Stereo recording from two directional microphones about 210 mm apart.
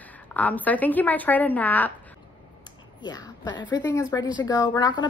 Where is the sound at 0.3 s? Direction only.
5° left (ahead or behind).